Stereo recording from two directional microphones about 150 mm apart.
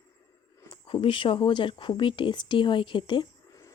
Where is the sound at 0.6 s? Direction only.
30° left (ahead or behind).